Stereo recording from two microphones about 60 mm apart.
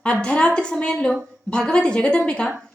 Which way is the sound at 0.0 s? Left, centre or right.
Centre.